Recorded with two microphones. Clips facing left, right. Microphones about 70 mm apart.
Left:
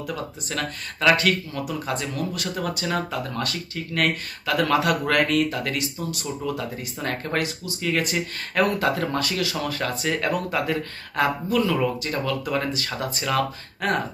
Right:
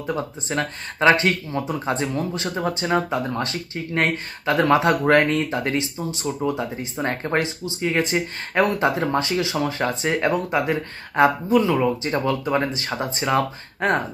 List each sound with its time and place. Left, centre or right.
0.0 s speech: right